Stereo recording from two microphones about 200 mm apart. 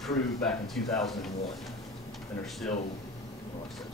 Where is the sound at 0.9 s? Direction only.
Centre (ahead or behind).